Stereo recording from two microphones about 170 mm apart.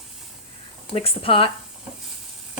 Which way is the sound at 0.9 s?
35° left (ahead or behind).